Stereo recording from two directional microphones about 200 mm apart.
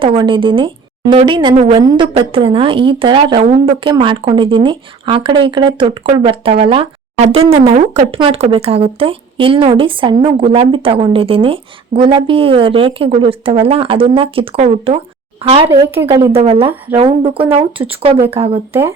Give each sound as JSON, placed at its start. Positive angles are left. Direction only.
{"t": 0.0, "sound": "a woman's voice", "side_deg": -25}
{"t": 1.5, "sound": "a woman's voice", "side_deg": -35}
{"t": 1.8, "sound": "speech", "side_deg": -20}
{"t": 18.7, "sound": "speech", "side_deg": -10}